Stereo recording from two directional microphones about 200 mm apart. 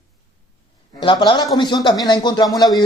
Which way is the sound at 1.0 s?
20° left (ahead or behind).